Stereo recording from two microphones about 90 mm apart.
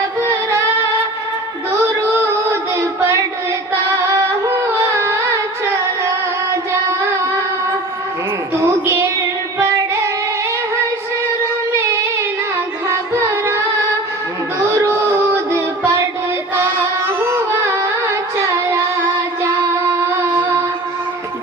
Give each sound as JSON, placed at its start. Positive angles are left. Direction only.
{"t": 0.2, "sound": "music", "side_deg": -30}
{"t": 1.9, "sound": "a sound", "side_deg": -30}
{"t": 4.0, "sound": "carnatic music", "side_deg": -30}
{"t": 8.5, "sound": "music", "side_deg": -30}
{"t": 12.9, "sound": "carnatic music", "side_deg": -30}
{"t": 14.6, "sound": "music", "side_deg": -30}
{"t": 19.4, "sound": "child singing", "side_deg": -30}